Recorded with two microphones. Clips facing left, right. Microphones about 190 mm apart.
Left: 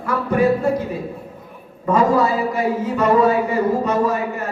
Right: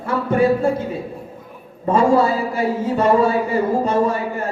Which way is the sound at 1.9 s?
30° right (ahead or behind).